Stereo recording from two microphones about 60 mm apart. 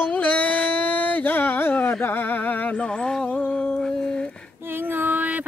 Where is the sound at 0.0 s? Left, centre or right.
Centre.